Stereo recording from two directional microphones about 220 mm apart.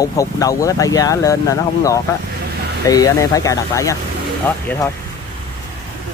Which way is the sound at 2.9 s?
15° left (ahead or behind).